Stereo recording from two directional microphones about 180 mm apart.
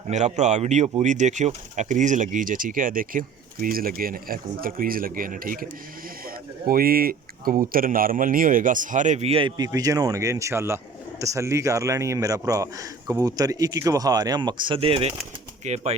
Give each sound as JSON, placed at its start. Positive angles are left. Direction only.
{"t": 0.1, "sound": "speech", "side_deg": -40}
{"t": 6.2, "sound": "a sound", "side_deg": -55}
{"t": 7.7, "sound": "speech", "side_deg": -50}
{"t": 9.6, "sound": "a man's voice", "side_deg": -20}